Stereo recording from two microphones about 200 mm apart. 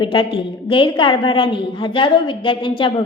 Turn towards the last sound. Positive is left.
turn(degrees=25)  # may be behind; listen again after turning